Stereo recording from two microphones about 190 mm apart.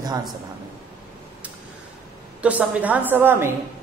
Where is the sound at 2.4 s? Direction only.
10° right (ahead or behind).